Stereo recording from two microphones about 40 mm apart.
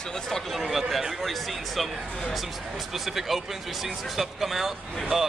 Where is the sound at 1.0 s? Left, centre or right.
Centre.